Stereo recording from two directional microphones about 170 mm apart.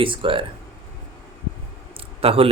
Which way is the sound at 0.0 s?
30° right (ahead or behind).